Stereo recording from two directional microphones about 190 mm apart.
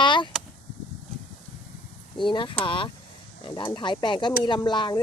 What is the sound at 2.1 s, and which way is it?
Speech, 25° left (ahead or behind).